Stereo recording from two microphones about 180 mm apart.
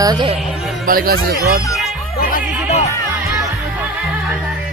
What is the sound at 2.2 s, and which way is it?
Music, 50° left (ahead or behind).